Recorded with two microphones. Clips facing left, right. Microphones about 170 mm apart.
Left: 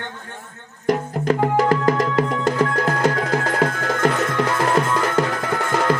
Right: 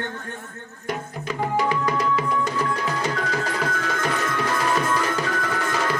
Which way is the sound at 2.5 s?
55° left (ahead or behind).